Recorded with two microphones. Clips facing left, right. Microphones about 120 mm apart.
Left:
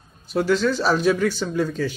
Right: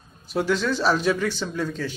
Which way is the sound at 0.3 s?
Centre (ahead or behind).